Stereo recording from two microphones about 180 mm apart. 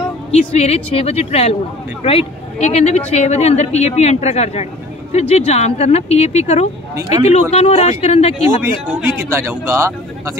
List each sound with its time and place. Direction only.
0.3 s speech: 35° left (ahead or behind)
8.6 s speech: 15° right (ahead or behind)